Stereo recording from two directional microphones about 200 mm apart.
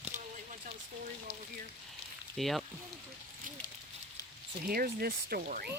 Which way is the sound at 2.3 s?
Centre (ahead or behind).